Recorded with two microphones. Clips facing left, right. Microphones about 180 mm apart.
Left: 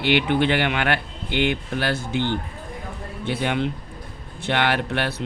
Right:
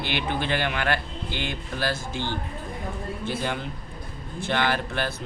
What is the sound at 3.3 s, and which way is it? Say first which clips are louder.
Speech: left 7 dB; 65° left (ahead or behind).